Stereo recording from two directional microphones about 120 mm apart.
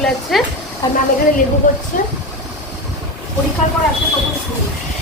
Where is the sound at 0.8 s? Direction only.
30° left (ahead or behind).